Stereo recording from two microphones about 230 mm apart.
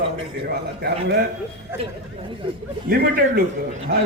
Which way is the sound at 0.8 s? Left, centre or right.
Right.